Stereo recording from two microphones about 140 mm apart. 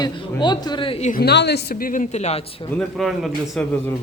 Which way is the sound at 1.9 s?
60° left (ahead or behind).